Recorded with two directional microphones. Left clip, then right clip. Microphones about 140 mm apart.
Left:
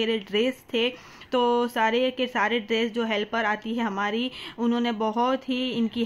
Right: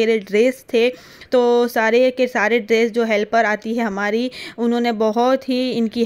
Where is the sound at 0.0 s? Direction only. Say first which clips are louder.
Right 9 dB; 45° right (ahead or behind).